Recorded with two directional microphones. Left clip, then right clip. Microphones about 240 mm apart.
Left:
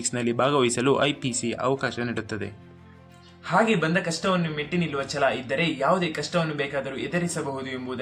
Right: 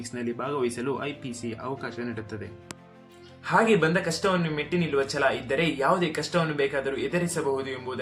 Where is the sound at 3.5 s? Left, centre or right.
Centre.